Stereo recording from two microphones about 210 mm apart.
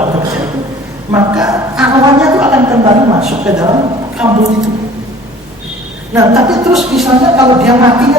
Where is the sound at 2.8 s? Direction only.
30° right (ahead or behind).